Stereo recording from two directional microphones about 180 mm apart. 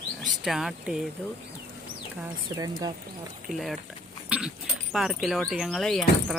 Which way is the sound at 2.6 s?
25° right (ahead or behind).